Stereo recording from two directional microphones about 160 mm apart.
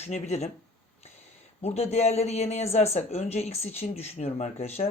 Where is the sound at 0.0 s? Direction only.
45° left (ahead or behind).